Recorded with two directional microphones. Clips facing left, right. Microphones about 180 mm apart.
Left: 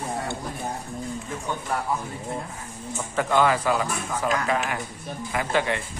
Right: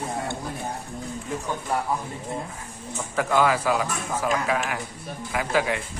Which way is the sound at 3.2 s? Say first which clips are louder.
Even; 5° right (ahead or behind).